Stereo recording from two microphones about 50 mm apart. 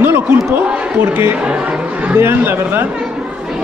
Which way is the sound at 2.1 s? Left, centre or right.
Right.